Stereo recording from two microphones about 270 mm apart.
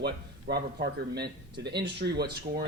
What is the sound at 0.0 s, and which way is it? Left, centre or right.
Speech, right.